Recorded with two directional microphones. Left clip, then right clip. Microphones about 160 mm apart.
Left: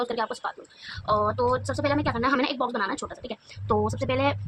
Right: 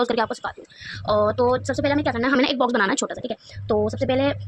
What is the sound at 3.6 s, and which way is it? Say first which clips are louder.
Speech: right 4 dB; 20° right (ahead or behind).